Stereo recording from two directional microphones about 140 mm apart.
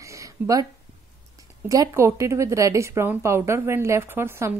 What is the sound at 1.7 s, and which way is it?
Speech, 20° right (ahead or behind).